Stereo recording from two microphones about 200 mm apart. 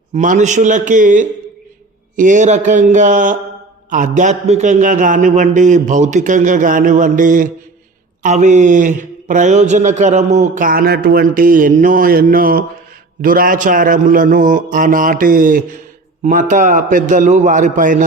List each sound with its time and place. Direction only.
0.1 s a man's voice: 35° right (ahead or behind)